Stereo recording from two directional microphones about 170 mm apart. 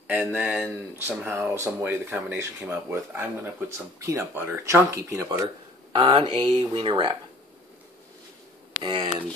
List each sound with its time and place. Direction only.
0.1 s speech: 10° right (ahead or behind)
5.9 s speech: 30° right (ahead or behind)
8.8 s speech: 30° right (ahead or behind)